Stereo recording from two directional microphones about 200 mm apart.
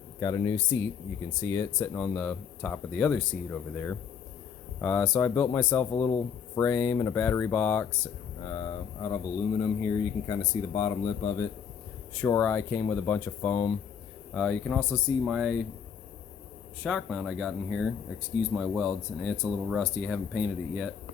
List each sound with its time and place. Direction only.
0.2 s speech: 20° left (ahead or behind)
14.3 s speech: 5° left (ahead or behind)
16.8 s speech: centre (ahead or behind)